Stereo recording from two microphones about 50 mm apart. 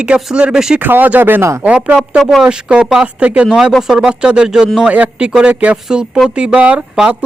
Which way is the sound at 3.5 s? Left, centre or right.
Centre.